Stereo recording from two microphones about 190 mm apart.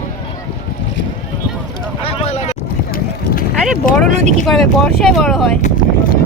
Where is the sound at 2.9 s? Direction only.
50° left (ahead or behind).